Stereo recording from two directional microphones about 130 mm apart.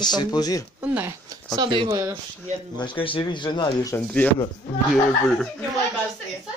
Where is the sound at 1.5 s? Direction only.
35° right (ahead or behind).